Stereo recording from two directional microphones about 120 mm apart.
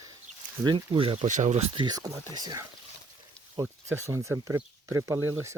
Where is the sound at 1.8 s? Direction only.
35° right (ahead or behind).